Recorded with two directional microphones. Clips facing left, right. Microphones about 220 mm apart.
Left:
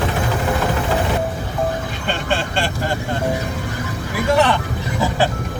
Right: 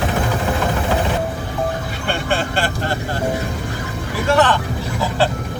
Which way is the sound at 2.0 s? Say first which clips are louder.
Right 2 dB; 10° right (ahead or behind).